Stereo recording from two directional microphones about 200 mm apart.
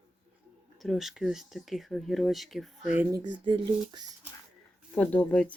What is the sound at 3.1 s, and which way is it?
Speech, 20° right (ahead or behind).